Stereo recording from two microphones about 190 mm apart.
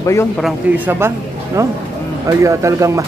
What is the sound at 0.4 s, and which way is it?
Speech, 10° right (ahead or behind).